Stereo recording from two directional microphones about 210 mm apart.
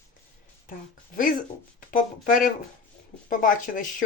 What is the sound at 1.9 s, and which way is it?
Speech, 40° left (ahead or behind).